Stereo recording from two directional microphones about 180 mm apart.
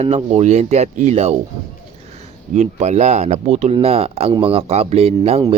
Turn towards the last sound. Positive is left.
turn(degrees=-35)  # may be behind; listen again after turning